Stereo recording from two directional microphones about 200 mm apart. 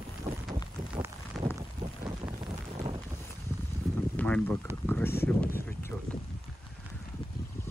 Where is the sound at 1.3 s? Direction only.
Centre (ahead or behind).